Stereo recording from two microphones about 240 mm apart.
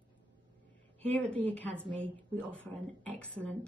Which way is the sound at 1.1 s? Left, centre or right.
Centre.